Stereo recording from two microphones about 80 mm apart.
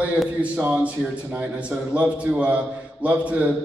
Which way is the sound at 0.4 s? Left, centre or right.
Right.